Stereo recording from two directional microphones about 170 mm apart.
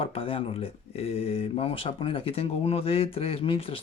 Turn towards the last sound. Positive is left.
turn(degrees=35)  # may be behind; listen again after turning